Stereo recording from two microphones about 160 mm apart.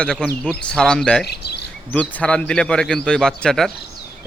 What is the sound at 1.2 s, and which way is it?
Speech, 90° left.